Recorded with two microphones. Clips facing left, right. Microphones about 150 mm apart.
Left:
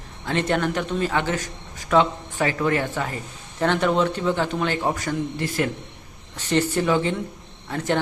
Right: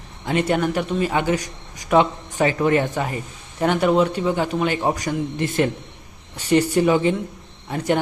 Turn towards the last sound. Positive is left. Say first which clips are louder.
# right 2 dB
turn(degrees=-15)  # may be behind; listen again after turning